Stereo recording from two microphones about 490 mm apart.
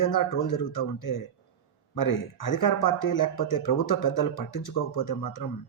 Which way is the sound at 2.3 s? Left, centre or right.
Left.